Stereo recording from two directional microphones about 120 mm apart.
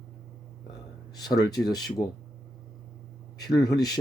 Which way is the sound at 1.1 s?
35° left (ahead or behind).